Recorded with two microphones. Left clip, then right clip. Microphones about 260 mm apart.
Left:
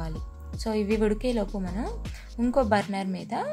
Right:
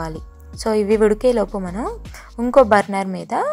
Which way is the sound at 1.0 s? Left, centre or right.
Centre.